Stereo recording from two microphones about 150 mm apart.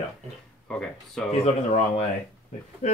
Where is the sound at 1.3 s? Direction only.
45° left (ahead or behind).